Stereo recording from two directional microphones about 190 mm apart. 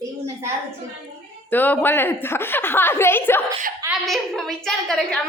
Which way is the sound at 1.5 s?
10° left (ahead or behind).